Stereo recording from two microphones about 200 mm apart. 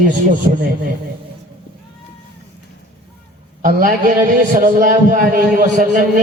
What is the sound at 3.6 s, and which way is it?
A man's voice, 45° right (ahead or behind).